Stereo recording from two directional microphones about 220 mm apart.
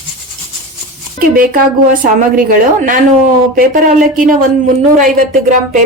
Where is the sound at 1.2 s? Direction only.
40° right (ahead or behind).